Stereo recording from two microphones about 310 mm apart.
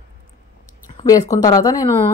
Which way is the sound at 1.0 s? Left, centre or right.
Centre.